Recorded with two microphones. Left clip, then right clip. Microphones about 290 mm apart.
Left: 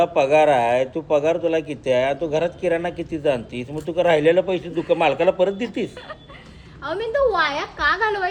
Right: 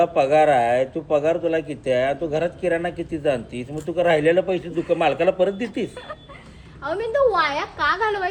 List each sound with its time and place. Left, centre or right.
0.0 s a man's voice: centre
6.8 s a woman's voice: centre